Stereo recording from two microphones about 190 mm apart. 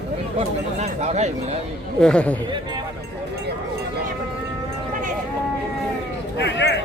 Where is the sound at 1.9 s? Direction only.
5° left (ahead or behind).